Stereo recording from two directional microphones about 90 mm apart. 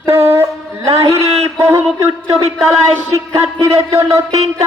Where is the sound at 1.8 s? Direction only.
10° left (ahead or behind).